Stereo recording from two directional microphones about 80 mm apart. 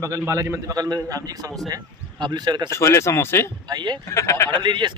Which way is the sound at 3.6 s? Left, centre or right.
Right.